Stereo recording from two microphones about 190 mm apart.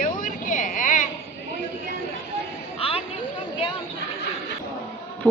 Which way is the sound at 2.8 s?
30° left (ahead or behind).